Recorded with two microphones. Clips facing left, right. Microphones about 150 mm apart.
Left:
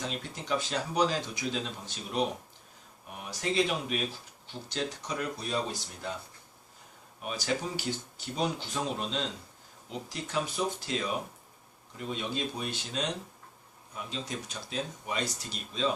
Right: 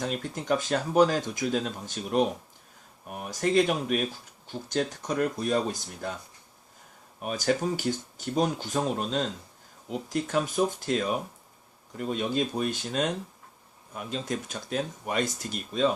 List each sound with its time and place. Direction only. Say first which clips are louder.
0.0 s speech: right 6 dB; 50° right (ahead or behind)
7.2 s speech: right 6 dB; 50° right (ahead or behind)